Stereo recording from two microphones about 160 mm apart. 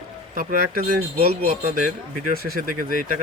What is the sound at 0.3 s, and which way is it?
Speech, 65° right (ahead or behind).